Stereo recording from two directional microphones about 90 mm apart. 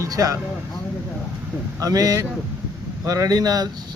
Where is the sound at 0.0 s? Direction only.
40° right (ahead or behind).